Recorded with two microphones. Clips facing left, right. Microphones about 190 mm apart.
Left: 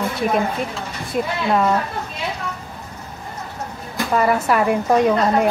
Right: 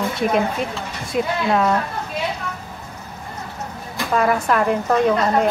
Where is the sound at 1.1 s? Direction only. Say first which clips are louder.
Even; centre (ahead or behind).